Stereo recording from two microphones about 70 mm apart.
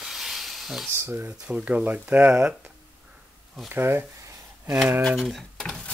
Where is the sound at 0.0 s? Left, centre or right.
Centre.